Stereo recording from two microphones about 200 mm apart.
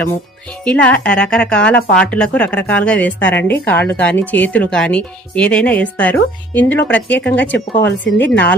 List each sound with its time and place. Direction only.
0.6 s speech: 5° left (ahead or behind)